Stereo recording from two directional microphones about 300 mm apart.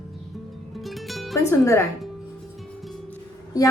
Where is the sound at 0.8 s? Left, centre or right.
Centre.